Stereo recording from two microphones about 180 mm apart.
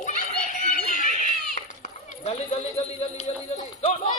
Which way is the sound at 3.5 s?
40° left (ahead or behind).